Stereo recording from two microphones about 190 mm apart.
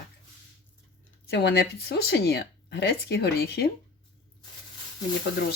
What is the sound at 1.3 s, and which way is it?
Speech, 60° left (ahead or behind).